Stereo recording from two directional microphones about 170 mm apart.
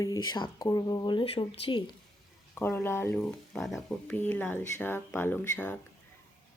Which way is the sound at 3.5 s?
Centre (ahead or behind).